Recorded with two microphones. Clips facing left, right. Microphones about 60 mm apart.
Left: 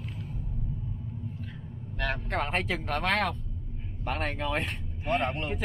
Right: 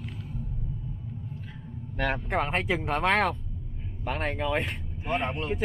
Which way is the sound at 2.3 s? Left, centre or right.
Centre.